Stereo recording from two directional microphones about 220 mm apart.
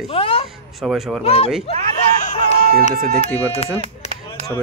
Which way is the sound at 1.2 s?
25° left (ahead or behind).